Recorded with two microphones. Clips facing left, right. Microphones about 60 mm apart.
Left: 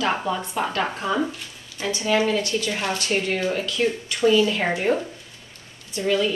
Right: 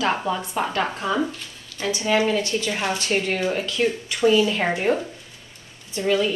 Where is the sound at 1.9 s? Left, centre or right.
Centre.